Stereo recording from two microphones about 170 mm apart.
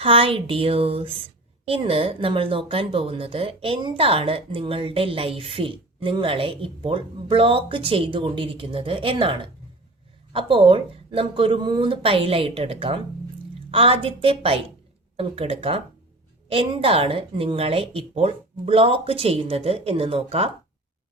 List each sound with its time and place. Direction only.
0.0 s speech: 30° right (ahead or behind)